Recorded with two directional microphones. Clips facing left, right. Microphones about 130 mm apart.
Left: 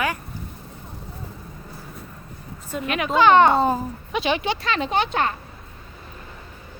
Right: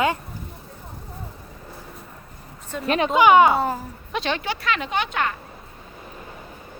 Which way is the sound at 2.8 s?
35° right (ahead or behind).